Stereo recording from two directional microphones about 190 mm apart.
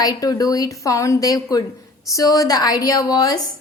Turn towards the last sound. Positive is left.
turn(degrees=20)  # may be behind; listen again after turning